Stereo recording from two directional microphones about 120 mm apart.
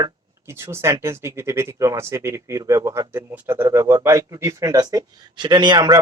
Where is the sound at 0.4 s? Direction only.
20° right (ahead or behind).